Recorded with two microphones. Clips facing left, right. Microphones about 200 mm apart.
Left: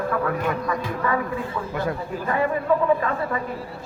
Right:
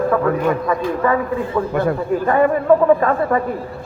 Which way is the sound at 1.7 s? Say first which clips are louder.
Right 8 dB; 55° right (ahead or behind).